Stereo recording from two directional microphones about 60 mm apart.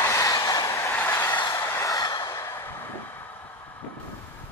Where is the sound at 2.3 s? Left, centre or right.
Left.